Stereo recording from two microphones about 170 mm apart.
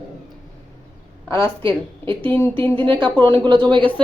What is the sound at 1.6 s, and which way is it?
A woman's voice, 30° right (ahead or behind).